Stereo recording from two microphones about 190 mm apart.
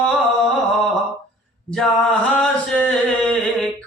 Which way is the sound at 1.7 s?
5° left (ahead or behind).